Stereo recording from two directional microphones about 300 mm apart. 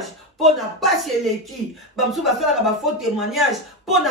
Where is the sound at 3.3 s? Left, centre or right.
Centre.